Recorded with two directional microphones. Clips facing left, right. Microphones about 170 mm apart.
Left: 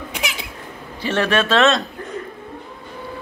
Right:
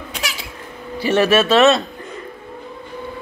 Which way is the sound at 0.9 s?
10° right (ahead or behind).